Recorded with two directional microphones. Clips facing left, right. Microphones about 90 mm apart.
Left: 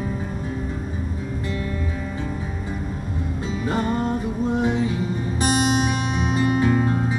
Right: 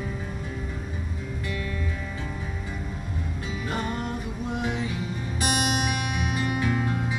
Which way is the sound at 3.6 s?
25° left (ahead or behind).